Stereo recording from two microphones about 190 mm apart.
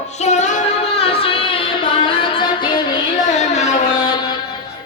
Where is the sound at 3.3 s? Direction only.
40° left (ahead or behind).